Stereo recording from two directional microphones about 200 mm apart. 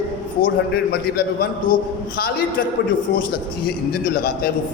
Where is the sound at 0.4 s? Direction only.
50° left (ahead or behind).